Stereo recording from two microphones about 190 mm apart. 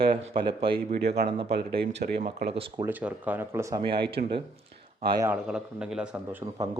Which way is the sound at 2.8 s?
10° right (ahead or behind).